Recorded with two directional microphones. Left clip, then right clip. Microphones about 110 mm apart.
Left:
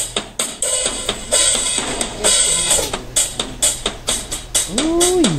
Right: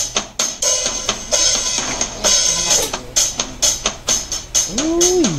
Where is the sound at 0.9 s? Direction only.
25° left (ahead or behind).